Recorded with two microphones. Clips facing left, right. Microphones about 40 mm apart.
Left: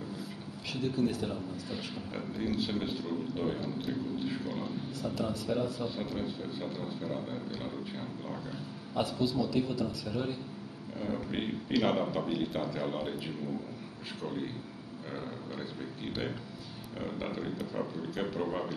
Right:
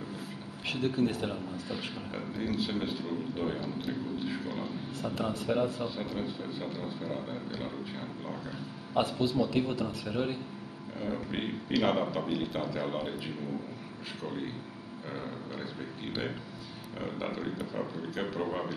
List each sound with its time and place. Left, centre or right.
0.7 s a man's voice: right
2.1 s speech: centre
5.0 s a man's voice: right
5.9 s speech: centre
8.9 s a man's voice: right
11.0 s speech: centre
17.0 s speech: centre